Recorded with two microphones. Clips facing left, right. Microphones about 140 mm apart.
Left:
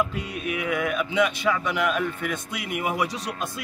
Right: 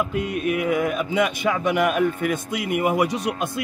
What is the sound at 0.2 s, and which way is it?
A man's voice, 50° right (ahead or behind).